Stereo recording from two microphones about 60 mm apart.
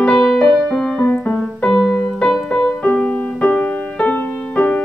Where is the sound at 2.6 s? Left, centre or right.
Centre.